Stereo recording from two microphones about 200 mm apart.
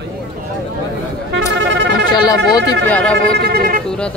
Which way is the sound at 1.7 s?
60° right (ahead or behind).